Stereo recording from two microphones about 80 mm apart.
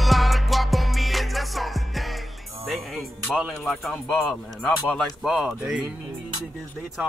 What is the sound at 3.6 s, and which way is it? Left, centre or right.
Speech, centre.